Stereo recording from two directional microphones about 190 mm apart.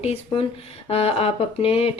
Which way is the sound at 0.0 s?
35° left (ahead or behind).